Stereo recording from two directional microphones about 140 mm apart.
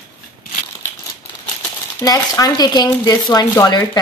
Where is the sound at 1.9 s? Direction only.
20° left (ahead or behind).